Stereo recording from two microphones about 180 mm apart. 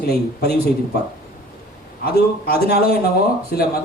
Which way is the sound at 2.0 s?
60° left (ahead or behind).